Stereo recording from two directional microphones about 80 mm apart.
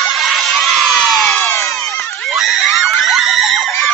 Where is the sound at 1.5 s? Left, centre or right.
Left.